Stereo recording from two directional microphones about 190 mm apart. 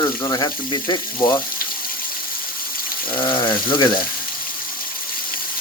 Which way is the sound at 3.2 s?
25° left (ahead or behind).